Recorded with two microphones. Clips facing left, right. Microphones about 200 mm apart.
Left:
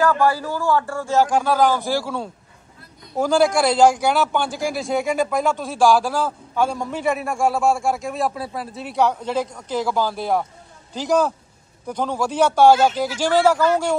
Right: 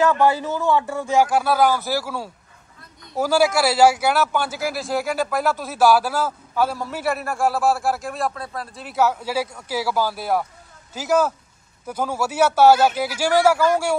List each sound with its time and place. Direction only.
0.0 s a man's voice: 20° right (ahead or behind)